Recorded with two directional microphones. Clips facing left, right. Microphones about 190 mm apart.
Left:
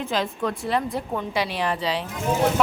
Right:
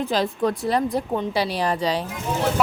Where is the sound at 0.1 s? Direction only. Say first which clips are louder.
Right 2 dB; 35° right (ahead or behind).